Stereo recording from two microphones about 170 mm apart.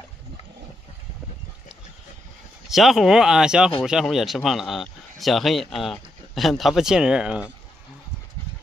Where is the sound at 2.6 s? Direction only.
Centre (ahead or behind).